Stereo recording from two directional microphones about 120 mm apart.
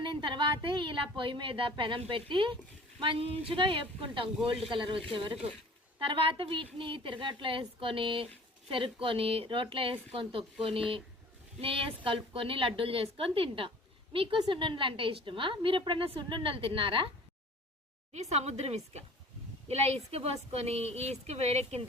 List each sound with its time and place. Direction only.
0.0 s a woman's voice: 45° right (ahead or behind)
18.1 s a woman's voice: 70° right (ahead or behind)